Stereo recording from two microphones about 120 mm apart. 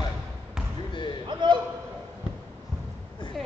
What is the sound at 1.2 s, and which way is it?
Speech, 40° right (ahead or behind).